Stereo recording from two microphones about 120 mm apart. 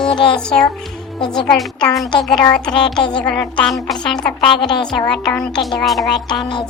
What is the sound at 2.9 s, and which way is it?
Speech, 40° left (ahead or behind).